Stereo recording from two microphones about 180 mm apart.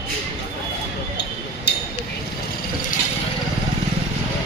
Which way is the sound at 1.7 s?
65° left (ahead or behind).